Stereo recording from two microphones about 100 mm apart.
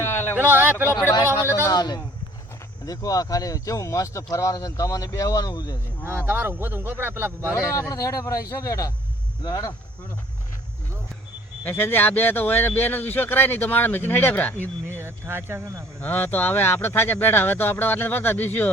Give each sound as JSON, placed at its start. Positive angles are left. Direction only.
{"t": 0.0, "sound": "a sound", "side_deg": 20}
{"t": 0.3, "sound": "speech", "side_deg": -20}
{"t": 1.7, "sound": "speech", "side_deg": 45}
{"t": 6.1, "sound": "speech", "side_deg": -25}
{"t": 7.5, "sound": "speech", "side_deg": 30}
{"t": 11.6, "sound": "speech", "side_deg": 25}
{"t": 14.9, "sound": "speech", "side_deg": -25}
{"t": 16.0, "sound": "speech", "side_deg": 20}